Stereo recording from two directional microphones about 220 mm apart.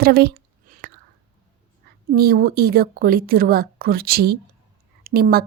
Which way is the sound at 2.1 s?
45° right (ahead or behind).